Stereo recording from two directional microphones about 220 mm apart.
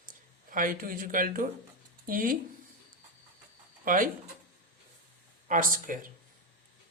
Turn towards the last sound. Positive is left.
turn(degrees=-40)  # may be behind; listen again after turning